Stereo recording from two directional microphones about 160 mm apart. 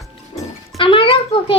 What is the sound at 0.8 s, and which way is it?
Speech, 35° left (ahead or behind).